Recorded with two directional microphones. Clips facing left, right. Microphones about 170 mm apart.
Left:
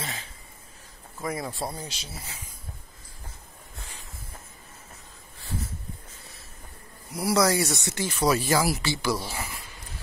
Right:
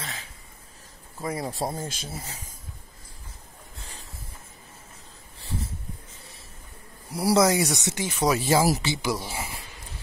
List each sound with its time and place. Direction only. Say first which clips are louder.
1.2 s speech: right 2 dB; 30° right (ahead or behind)
7.1 s speech: right 2 dB; 30° right (ahead or behind)